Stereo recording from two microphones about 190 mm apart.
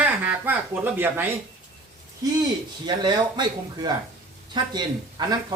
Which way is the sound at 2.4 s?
20° right (ahead or behind).